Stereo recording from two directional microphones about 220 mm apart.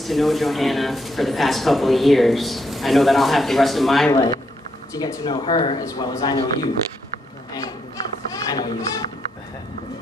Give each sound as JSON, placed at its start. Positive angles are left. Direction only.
{"t": 0.0, "sound": "speech", "side_deg": 0}
{"t": 4.1, "sound": "a man's voice", "side_deg": 15}
{"t": 8.3, "sound": "a sound", "side_deg": 15}